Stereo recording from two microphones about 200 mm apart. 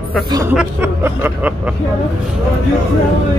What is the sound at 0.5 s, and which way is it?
Speech, 10° right (ahead or behind).